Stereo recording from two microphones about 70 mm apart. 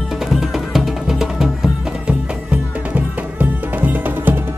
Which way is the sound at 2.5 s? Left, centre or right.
Right.